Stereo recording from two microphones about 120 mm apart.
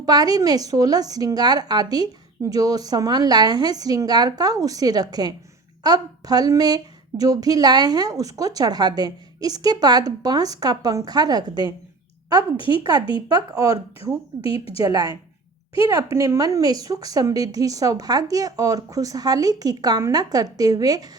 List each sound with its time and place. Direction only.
0.0 s speech: 35° right (ahead or behind)
12.4 s speech: 45° left (ahead or behind)
13.2 s speech: 30° right (ahead or behind)
14.4 s speech: 50° left (ahead or behind)
14.8 s speech: 30° right (ahead or behind)